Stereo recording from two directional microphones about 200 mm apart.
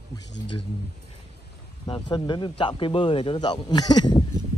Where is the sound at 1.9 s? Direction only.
20° left (ahead or behind).